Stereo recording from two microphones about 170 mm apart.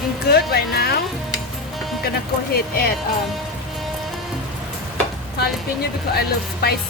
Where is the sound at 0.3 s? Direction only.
70° left (ahead or behind).